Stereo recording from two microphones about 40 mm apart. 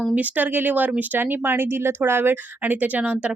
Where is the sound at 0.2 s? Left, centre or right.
Right.